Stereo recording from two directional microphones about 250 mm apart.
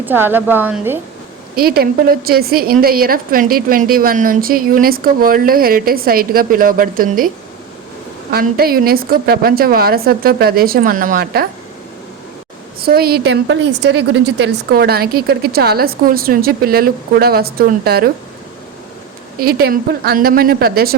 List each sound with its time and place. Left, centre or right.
0.0 s a woman's voice: centre
1.5 s a woman's voice: right
8.3 s a woman's voice: right
12.8 s a woman's voice: right
19.4 s a woman's voice: right